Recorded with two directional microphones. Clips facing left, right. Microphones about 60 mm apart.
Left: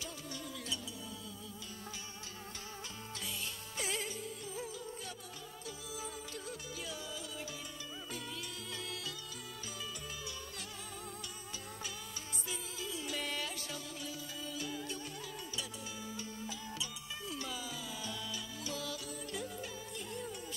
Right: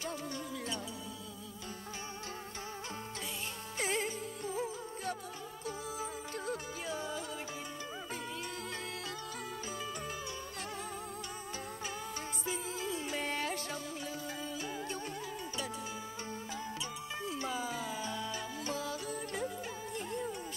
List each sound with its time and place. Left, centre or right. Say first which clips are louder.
3.7 s music: right 5 dB; right
12.4 s music: right 6 dB; right
17.2 s music: right 5 dB; right
20.1 s music: right 5 dB; right